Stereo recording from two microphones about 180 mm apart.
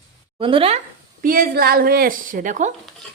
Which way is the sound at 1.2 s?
50° right (ahead or behind).